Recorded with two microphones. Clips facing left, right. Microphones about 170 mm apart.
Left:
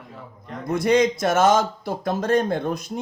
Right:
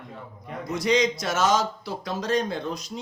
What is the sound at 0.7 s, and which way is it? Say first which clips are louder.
A man's voice: left 4 dB; 55° left (ahead or behind).